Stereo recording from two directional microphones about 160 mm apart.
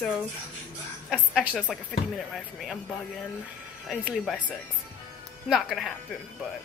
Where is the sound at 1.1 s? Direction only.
5° right (ahead or behind).